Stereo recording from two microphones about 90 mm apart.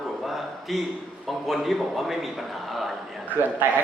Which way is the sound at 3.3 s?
20° right (ahead or behind).